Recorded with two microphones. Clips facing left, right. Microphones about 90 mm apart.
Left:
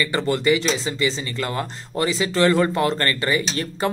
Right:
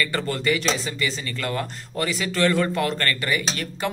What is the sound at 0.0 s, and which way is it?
Speech, 20° left (ahead or behind).